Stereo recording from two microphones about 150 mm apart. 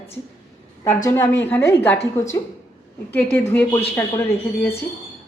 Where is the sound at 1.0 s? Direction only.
15° left (ahead or behind).